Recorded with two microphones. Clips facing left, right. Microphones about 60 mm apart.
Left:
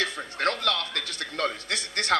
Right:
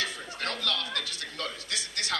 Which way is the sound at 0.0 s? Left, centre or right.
Left.